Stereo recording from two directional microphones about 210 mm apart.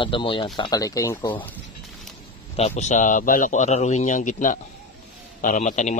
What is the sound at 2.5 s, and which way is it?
Speech, 30° left (ahead or behind).